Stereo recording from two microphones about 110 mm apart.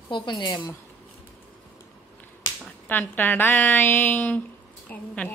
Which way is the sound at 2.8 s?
15° left (ahead or behind).